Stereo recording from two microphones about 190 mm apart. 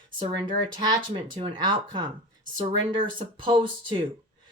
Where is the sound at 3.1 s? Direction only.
25° right (ahead or behind).